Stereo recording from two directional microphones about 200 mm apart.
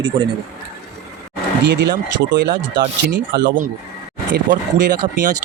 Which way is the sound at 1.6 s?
60° right (ahead or behind).